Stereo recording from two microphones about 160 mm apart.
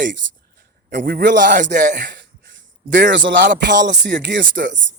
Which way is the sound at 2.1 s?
90° right.